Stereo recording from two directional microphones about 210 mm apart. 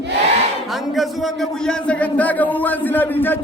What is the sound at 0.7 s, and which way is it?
A man's voice, centre (ahead or behind).